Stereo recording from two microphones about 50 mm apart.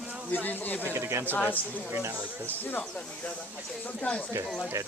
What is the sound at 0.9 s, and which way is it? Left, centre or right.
Speech, right.